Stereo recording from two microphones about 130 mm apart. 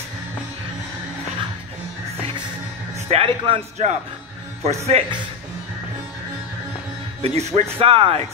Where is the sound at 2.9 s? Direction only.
45° right (ahead or behind).